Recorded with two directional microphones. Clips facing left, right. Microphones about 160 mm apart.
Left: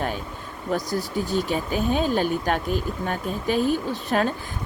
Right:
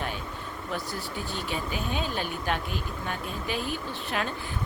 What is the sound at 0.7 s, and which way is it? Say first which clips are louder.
Speech: left 10 dB; 40° left (ahead or behind).